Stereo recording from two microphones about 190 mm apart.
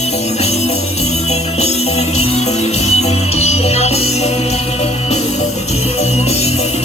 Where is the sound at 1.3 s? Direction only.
35° left (ahead or behind).